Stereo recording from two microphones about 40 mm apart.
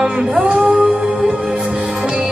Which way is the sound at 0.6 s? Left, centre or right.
Centre.